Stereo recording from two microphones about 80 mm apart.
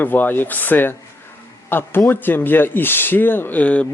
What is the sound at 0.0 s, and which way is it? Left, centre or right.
Speech, left.